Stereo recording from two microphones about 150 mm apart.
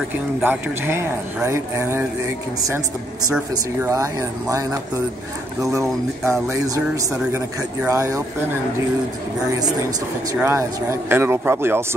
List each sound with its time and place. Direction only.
0.4 s speech: 15° right (ahead or behind)
3.8 s speech: 20° right (ahead or behind)
10.4 s speech: 15° right (ahead or behind)